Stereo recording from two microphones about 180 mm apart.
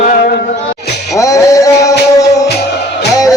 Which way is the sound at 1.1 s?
20° left (ahead or behind).